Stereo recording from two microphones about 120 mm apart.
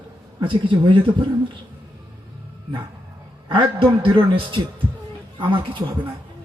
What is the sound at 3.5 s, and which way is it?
Speech, 45° right (ahead or behind).